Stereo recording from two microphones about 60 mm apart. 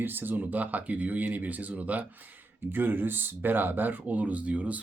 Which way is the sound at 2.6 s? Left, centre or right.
Right.